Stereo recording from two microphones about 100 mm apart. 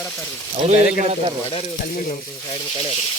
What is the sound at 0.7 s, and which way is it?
Speech, 90° right.